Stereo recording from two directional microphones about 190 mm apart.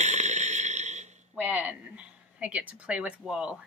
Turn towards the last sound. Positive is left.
turn(degrees=-5)  # may be behind; listen again after turning